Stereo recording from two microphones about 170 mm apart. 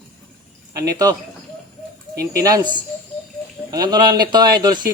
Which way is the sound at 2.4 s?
20° right (ahead or behind).